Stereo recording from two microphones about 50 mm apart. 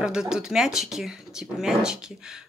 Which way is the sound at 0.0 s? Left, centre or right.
Centre.